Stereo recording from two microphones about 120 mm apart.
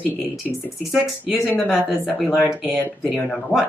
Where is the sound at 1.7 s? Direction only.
Centre (ahead or behind).